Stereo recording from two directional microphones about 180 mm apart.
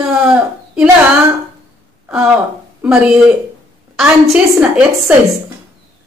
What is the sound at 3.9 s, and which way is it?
A woman's voice, 5° right (ahead or behind).